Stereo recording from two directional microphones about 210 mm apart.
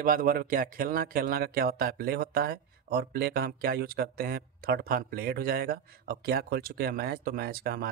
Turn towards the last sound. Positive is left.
turn(degrees=-45)  # may be behind; listen again after turning